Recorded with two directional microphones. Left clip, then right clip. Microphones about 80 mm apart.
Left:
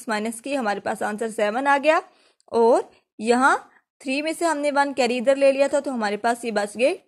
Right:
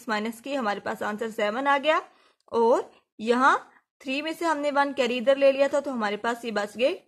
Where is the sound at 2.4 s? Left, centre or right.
Left.